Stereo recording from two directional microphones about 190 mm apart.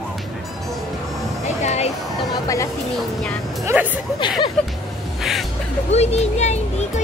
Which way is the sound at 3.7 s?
15° right (ahead or behind).